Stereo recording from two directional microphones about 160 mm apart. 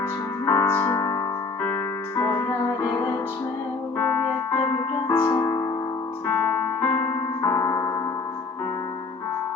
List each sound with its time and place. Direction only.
0.4 s music: 15° left (ahead or behind)
3.9 s music: 15° left (ahead or behind)
6.2 s keyboard: 15° left (ahead or behind)